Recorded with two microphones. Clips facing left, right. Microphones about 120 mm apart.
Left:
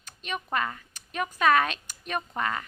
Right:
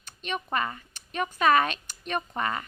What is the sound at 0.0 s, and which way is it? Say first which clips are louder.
Speech: right 2 dB; centre (ahead or behind).